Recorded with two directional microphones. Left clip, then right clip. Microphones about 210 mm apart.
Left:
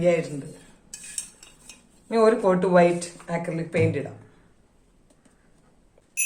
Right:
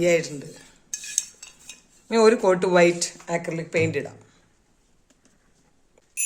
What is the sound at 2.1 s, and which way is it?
Speech, 50° right (ahead or behind).